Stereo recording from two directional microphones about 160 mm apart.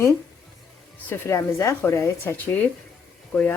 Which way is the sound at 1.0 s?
15° left (ahead or behind).